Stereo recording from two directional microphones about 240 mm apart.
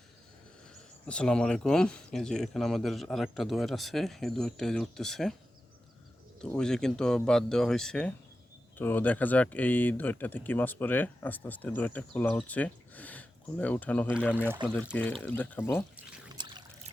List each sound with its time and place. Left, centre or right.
1.0 s speech: centre
6.4 s speech: centre
16.0 s trickle: centre